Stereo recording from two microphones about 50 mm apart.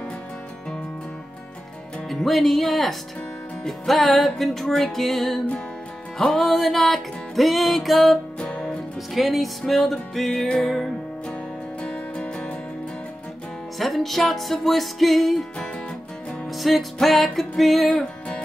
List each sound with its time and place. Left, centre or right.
2.0 s music: centre
8.4 s music: centre
9.1 s music: centre
11.8 s music: left
13.7 s music: centre
16.4 s music: centre
17.8 s music: centre